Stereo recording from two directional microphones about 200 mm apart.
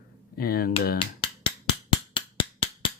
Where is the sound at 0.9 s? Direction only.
25° left (ahead or behind).